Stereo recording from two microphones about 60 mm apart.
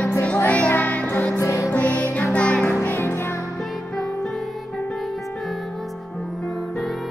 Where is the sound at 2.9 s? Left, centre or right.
Left.